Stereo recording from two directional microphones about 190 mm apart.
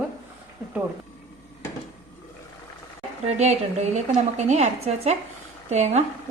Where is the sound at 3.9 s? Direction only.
35° right (ahead or behind).